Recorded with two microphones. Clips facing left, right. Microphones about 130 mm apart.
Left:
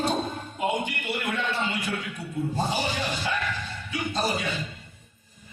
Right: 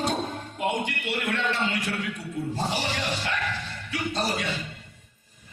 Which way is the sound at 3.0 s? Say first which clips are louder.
Even; 90° right.